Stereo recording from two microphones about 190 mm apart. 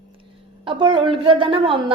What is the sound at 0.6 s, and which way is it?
A woman's voice, 25° right (ahead or behind).